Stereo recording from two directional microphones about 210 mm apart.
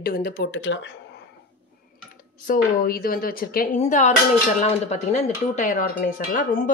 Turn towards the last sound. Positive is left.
turn(degrees=40)  # may be behind; listen again after turning